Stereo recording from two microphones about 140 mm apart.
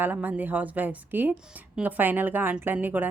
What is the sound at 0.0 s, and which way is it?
A woman's voice, 10° right (ahead or behind).